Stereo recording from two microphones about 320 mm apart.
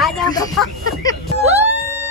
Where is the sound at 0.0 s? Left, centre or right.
Centre.